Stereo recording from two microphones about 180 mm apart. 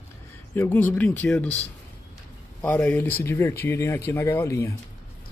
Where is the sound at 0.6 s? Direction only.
10° left (ahead or behind).